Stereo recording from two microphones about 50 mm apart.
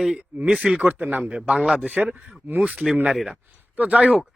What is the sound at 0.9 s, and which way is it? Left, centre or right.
Speech, right.